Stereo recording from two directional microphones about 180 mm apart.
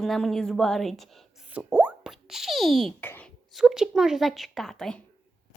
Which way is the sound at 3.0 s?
10° left (ahead or behind).